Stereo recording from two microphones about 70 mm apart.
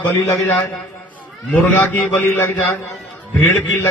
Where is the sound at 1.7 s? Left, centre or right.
Left.